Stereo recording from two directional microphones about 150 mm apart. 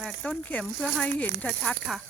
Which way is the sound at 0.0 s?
5° left (ahead or behind).